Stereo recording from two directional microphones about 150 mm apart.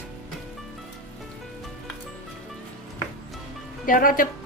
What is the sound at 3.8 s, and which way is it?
Speech, 70° left (ahead or behind).